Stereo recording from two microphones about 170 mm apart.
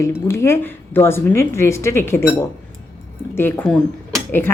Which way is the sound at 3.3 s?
10° left (ahead or behind).